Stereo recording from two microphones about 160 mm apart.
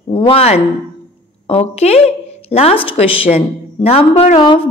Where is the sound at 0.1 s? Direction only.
35° left (ahead or behind).